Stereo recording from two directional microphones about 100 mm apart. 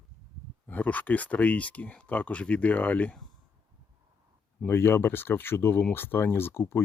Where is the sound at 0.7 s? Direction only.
15° left (ahead or behind).